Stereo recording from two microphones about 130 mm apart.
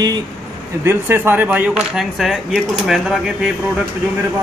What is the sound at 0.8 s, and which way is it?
A man's voice, 20° right (ahead or behind).